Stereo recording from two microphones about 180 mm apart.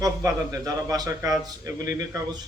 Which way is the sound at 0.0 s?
20° right (ahead or behind).